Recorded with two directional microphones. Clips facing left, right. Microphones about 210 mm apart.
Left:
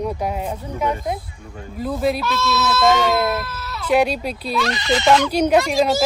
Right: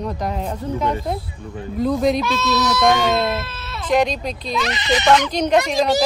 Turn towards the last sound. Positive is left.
turn(degrees=5)  # may be behind; listen again after turning